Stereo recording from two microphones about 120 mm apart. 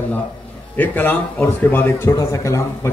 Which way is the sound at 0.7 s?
15° left (ahead or behind).